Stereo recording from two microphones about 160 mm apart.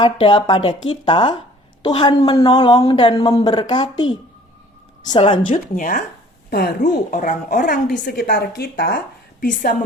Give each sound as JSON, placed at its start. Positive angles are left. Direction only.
{"t": 0.0, "sound": "speech", "side_deg": 30}
{"t": 5.4, "sound": "speech", "side_deg": 55}
{"t": 6.5, "sound": "a woman's voice", "side_deg": 70}
{"t": 7.1, "sound": "speech", "side_deg": 55}
{"t": 8.0, "sound": "a woman's voice", "side_deg": 70}